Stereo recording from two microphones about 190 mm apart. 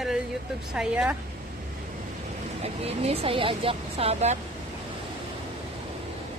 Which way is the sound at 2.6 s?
30° right (ahead or behind).